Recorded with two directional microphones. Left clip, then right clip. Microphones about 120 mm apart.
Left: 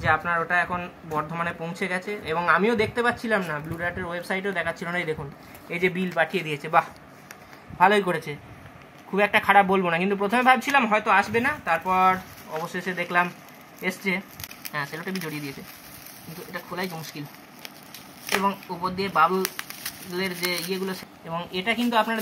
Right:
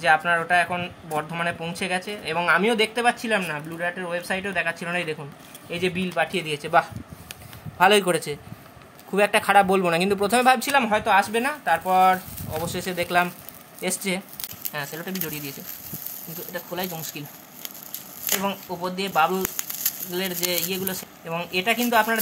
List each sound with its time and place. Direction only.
0.0 s speech: 40° right (ahead or behind)
6.7 s speech: 35° right (ahead or behind)
10.8 s speech: 15° right (ahead or behind)
12.5 s speech: 40° right (ahead or behind)
13.7 s a sound: 40° right (ahead or behind)
14.7 s speech: 30° right (ahead or behind)
18.4 s speech: 30° right (ahead or behind)
20.4 s speech: 30° right (ahead or behind)